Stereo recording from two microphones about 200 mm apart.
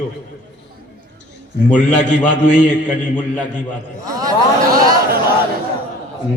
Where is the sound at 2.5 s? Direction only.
40° left (ahead or behind).